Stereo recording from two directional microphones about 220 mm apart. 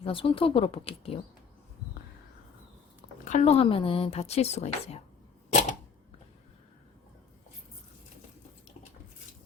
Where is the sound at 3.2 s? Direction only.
35° left (ahead or behind).